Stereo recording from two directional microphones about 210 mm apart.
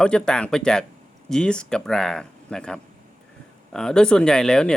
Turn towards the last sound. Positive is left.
turn(degrees=5)  # may be behind; listen again after turning